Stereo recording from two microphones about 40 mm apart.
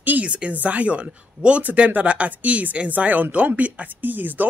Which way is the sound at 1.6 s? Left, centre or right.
Right.